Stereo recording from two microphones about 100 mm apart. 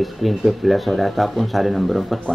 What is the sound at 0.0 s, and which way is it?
Speech, centre (ahead or behind).